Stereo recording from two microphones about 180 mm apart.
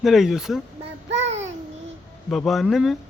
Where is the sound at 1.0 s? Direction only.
85° right.